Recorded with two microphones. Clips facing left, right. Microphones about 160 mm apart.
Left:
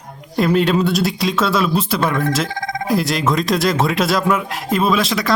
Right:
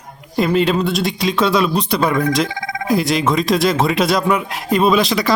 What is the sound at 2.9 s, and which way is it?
Speech, centre (ahead or behind).